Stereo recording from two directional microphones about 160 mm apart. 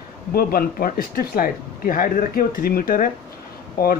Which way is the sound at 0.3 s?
70° left (ahead or behind).